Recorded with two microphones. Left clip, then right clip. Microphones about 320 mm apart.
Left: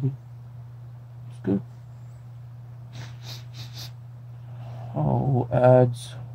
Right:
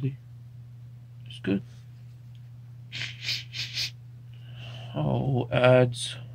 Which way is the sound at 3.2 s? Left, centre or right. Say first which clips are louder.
Right 11 dB; centre.